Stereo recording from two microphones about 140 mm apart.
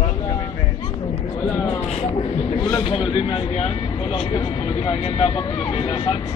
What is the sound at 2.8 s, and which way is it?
Speech, 45° left (ahead or behind).